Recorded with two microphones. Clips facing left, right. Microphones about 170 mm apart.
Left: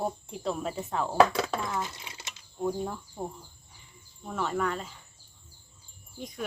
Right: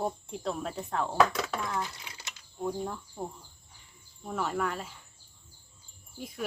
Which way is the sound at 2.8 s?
10° left (ahead or behind).